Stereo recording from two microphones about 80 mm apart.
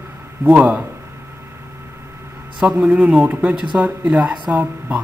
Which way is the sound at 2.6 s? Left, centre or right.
Centre.